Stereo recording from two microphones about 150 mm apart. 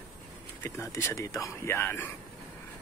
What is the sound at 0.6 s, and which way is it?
Speech, 15° left (ahead or behind).